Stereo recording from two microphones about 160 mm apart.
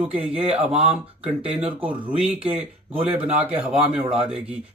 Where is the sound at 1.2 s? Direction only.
40° right (ahead or behind).